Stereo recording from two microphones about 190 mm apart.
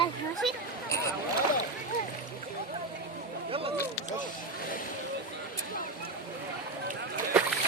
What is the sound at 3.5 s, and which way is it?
Speech, 30° right (ahead or behind).